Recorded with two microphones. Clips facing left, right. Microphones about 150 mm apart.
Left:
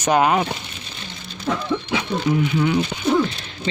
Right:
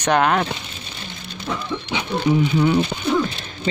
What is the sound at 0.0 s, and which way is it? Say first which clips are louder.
Speech: left 1 dB; 5° left (ahead or behind).